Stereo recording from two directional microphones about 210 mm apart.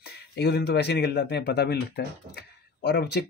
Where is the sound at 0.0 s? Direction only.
50° left (ahead or behind).